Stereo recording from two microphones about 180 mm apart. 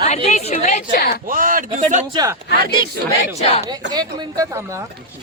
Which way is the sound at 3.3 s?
35° left (ahead or behind).